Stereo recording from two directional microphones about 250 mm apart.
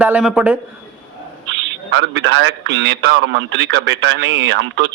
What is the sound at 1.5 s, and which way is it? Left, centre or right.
A man's voice, right.